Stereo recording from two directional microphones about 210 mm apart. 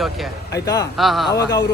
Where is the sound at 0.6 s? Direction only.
15° left (ahead or behind).